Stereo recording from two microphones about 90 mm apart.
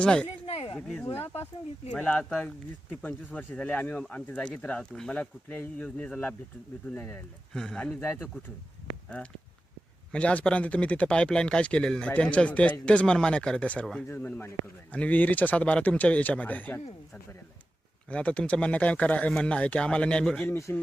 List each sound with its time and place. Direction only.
0.0 s speech: 10° left (ahead or behind)
0.4 s a sound: 90° left
0.8 s speech: 5° left (ahead or behind)
8.0 s speech: 20° left (ahead or behind)
10.1 s speech: 15° left (ahead or behind)
18.1 s speech: 15° left (ahead or behind)
20.5 s speech: 30° left (ahead or behind)